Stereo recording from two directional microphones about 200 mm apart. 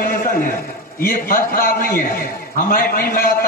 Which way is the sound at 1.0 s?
45° left (ahead or behind).